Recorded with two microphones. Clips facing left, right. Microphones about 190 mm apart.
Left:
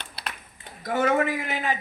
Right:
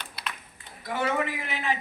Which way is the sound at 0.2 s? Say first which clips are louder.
Left 1 dB; 30° left (ahead or behind).